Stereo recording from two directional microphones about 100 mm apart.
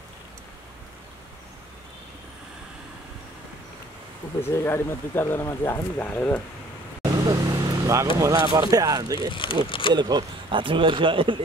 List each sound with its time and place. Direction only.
4.4 s speech: 25° left (ahead or behind)
7.2 s vehicle: 35° right (ahead or behind)
8.2 s speech: 40° right (ahead or behind)
9.3 s speech: 60° left (ahead or behind)
9.9 s speech: 45° right (ahead or behind)